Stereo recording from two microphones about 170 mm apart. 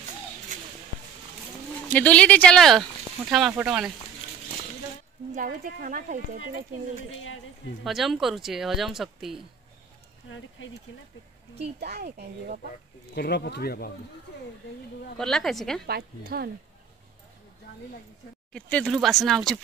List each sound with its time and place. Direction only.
0.5 s a sound: 45° right (ahead or behind)
1.9 s speech: 10° left (ahead or behind)
5.3 s speech: 55° right (ahead or behind)
7.8 s speech: centre (ahead or behind)
11.8 s speech: 70° right (ahead or behind)
13.1 s speech: 70° left (ahead or behind)
15.1 s speech: centre (ahead or behind)
15.9 s a woman's voice: 65° right (ahead or behind)
18.5 s speech: 5° left (ahead or behind)